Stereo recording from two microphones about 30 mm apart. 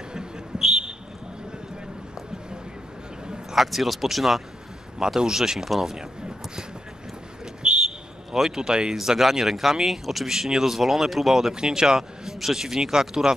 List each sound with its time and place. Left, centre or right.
3.5 s speech: centre
4.9 s speech: right
5.9 s a sound: right
7.6 s a sound: right
8.3 s speech: centre
8.5 s speech: right
8.9 s speech: centre
10.2 s speech: centre
11.5 s speech: right